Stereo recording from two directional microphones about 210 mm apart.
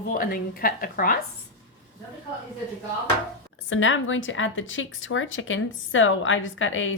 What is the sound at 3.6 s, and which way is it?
A woman's voice, 65° left (ahead or behind).